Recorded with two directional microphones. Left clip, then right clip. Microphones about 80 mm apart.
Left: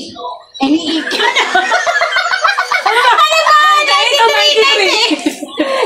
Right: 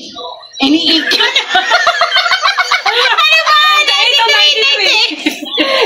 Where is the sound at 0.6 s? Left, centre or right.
Left.